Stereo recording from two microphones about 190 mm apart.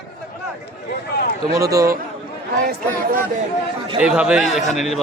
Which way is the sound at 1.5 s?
15° right (ahead or behind).